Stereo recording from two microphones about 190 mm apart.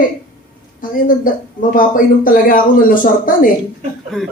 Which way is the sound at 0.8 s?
45° left (ahead or behind).